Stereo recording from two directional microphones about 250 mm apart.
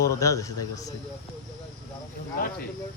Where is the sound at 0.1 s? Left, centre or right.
Centre.